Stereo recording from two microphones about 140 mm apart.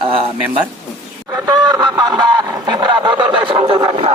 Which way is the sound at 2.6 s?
30° right (ahead or behind).